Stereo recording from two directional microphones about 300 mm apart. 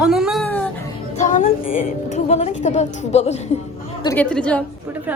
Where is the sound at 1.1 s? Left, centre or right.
Left.